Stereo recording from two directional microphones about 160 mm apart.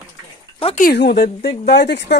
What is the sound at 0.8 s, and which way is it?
Speech, 80° left.